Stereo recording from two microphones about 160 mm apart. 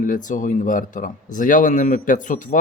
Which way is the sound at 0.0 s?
55° left (ahead or behind).